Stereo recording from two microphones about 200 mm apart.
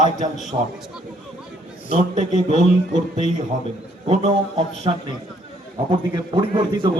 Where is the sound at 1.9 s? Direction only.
30° right (ahead or behind).